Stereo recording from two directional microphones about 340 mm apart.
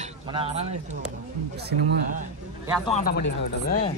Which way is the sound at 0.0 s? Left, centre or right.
Centre.